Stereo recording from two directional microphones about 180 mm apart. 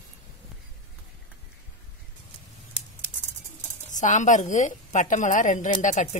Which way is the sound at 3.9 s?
45° left (ahead or behind).